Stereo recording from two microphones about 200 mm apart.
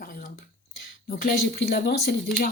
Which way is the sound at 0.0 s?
45° left (ahead or behind).